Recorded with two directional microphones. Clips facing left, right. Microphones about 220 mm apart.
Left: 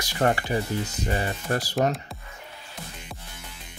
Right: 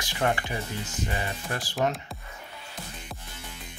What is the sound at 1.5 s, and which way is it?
Speech, 40° left (ahead or behind).